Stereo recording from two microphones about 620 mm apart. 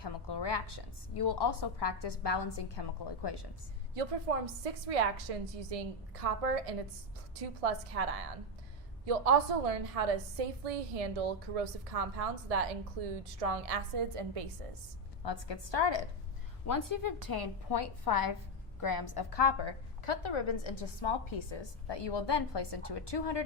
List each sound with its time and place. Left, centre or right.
0.0 s a woman's voice: left
3.9 s a woman's voice: right
9.0 s a woman's voice: right
15.2 s a woman's voice: left
16.6 s a woman's voice: left